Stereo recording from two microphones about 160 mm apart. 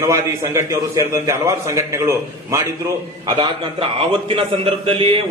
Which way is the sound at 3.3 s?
30° right (ahead or behind).